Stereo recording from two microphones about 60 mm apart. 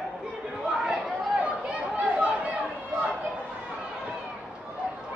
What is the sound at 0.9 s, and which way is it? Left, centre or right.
Chatter, centre.